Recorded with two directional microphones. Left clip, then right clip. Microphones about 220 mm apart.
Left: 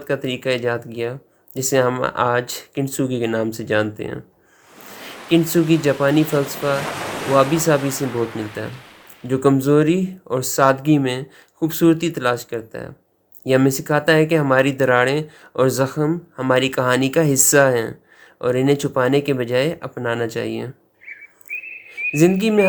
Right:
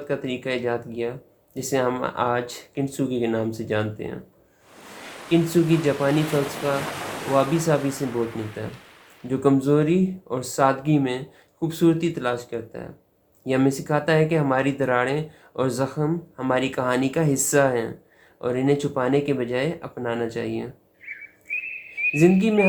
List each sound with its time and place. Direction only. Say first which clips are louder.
0.1 s speech: left 6 dB; 45° left (ahead or behind)
4.8 s a sound: left 3 dB; centre (ahead or behind)
5.8 s speech: left 4 dB; 45° left (ahead or behind)
6.1 s speech: left 5 dB; centre (ahead or behind)
9.2 s speech: left 4 dB; 45° left (ahead or behind)
22.1 s speech: left 4 dB; 45° left (ahead or behind)